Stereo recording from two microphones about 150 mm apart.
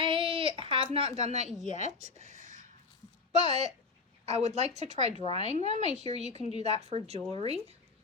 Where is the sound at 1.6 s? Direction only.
50° left (ahead or behind).